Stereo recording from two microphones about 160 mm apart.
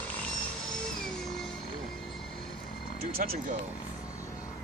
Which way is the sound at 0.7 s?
5° left (ahead or behind).